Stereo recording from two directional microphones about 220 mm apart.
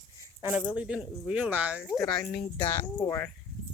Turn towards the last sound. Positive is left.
turn(degrees=10)  # may be behind; listen again after turning